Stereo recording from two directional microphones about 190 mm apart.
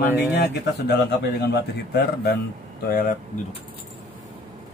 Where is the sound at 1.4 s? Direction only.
60° left (ahead or behind).